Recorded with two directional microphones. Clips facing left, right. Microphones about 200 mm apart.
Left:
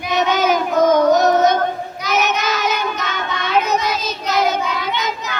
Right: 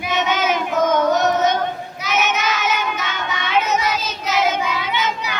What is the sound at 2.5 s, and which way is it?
Child singing, 35° left (ahead or behind).